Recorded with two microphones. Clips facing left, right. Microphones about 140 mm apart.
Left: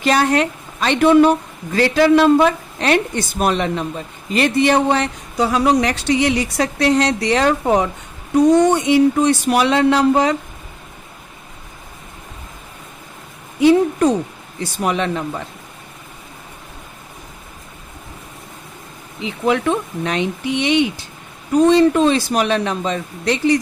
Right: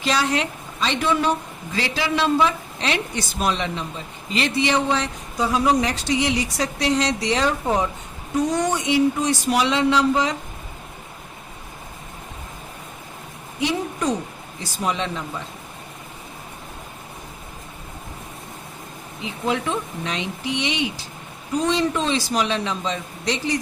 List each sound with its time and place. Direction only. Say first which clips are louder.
0.0 s speech: left 6 dB; 55° left (ahead or behind)
13.6 s speech: left 12 dB; 55° left (ahead or behind)
19.2 s speech: left 6 dB; 60° left (ahead or behind)